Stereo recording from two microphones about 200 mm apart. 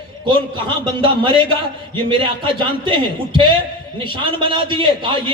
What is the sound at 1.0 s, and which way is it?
A man's voice, 25° right (ahead or behind).